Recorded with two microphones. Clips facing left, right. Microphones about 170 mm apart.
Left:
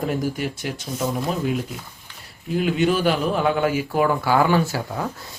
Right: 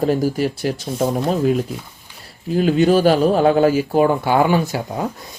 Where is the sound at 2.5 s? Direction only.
35° right (ahead or behind); by 5.0 s 20° right (ahead or behind).